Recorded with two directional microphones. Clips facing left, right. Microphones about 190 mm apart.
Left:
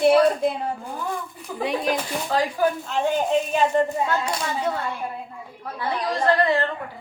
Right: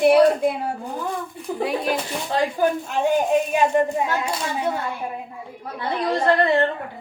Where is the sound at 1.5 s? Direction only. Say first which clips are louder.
Right 5 dB; 25° right (ahead or behind).